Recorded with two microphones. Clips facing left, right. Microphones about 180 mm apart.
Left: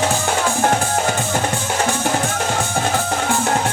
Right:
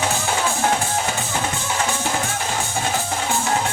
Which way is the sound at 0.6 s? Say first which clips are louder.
Left 3 dB; 55° left (ahead or behind).